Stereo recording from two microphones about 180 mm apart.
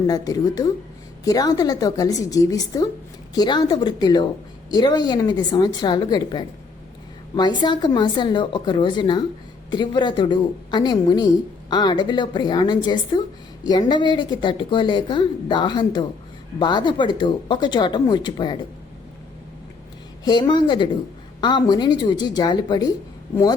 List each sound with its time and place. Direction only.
0.1 s a woman's voice: 20° left (ahead or behind)
20.2 s a woman's voice: 25° left (ahead or behind)